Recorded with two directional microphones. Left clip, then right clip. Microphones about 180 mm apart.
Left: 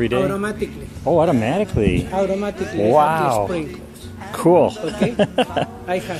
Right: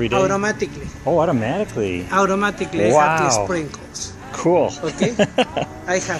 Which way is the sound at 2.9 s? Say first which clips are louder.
Even; 10° left (ahead or behind).